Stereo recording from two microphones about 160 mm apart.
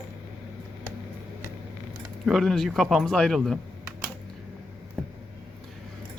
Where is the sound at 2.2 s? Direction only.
Centre (ahead or behind).